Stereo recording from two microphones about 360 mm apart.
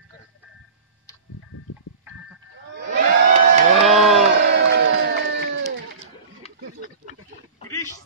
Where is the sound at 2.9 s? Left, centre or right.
Right.